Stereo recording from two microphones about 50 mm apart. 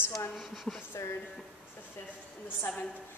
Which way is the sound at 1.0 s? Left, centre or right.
Left.